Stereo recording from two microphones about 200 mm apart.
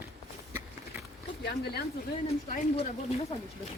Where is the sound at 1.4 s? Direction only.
55° left (ahead or behind).